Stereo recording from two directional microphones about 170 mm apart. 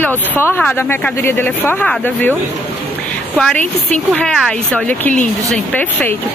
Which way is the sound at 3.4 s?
5° left (ahead or behind).